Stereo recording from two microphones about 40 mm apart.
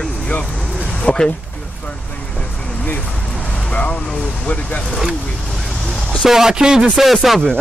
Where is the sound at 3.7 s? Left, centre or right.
Left.